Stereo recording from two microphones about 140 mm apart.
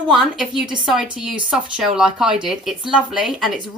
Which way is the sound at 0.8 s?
5° right (ahead or behind).